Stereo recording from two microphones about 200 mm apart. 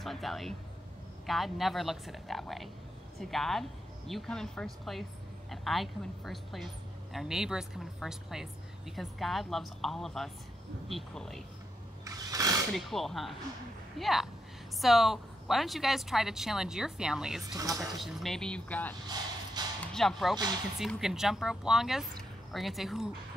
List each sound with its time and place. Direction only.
0.0 s a woman's voice: centre (ahead or behind)
12.0 s a sound: 15° right (ahead or behind)
12.7 s a woman's voice: centre (ahead or behind)
17.5 s speech: 15° right (ahead or behind)
17.7 s a woman's voice: centre (ahead or behind)
19.6 s a sound: 20° right (ahead or behind)
19.9 s speech: centre (ahead or behind)
20.3 s speech: 20° right (ahead or behind)
20.8 s a woman's voice: centre (ahead or behind)